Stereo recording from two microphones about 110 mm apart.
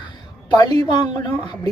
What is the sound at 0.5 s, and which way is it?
Speech, 40° left (ahead or behind).